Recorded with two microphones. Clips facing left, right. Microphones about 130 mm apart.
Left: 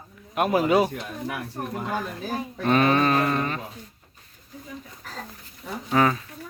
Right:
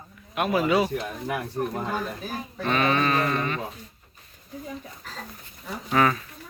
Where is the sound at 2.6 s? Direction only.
40° left (ahead or behind).